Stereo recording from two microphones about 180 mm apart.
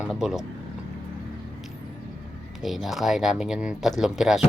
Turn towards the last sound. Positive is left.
turn(degrees=0)  # may be behind; listen again after turning